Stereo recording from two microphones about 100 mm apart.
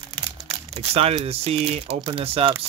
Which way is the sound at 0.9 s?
90° right.